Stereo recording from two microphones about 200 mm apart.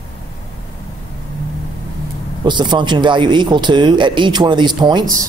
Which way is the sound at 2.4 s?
25° right (ahead or behind).